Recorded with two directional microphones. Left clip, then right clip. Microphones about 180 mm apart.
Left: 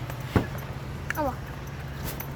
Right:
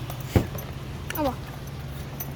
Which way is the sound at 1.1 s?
20° right (ahead or behind).